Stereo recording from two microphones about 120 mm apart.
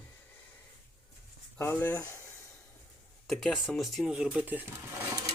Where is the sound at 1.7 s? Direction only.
15° left (ahead or behind).